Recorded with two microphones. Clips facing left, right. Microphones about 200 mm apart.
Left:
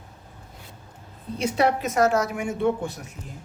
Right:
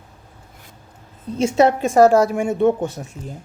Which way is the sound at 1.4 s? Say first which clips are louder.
Right 7 dB; 25° right (ahead or behind).